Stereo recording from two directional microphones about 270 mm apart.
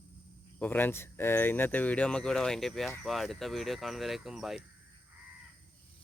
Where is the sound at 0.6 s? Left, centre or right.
Centre.